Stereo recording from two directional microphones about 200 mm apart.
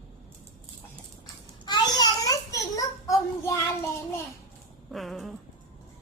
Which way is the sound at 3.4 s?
15° left (ahead or behind).